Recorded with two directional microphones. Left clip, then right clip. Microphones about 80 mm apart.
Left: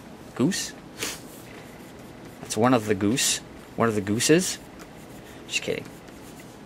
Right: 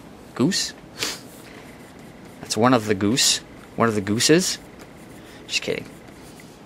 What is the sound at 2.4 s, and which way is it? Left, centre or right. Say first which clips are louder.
Speech: right 3 dB; centre.